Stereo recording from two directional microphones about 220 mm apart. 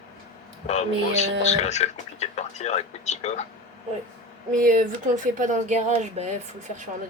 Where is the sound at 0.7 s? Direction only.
30° left (ahead or behind).